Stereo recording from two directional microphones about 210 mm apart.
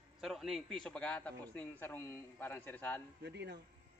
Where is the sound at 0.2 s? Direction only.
Centre (ahead or behind).